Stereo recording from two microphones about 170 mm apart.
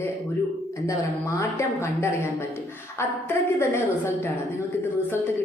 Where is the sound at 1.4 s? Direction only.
15° left (ahead or behind).